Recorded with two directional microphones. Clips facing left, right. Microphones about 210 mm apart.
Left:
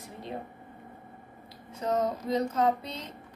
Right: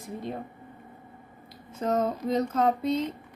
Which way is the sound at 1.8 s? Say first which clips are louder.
Right 2 dB; 50° right (ahead or behind).